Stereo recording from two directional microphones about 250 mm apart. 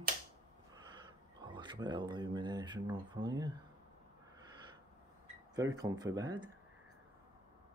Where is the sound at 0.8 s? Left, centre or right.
Centre.